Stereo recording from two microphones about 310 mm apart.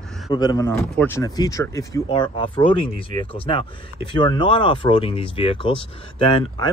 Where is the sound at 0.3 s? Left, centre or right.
Centre.